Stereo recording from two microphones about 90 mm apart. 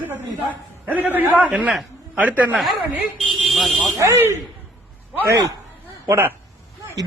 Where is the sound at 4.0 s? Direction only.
35° right (ahead or behind).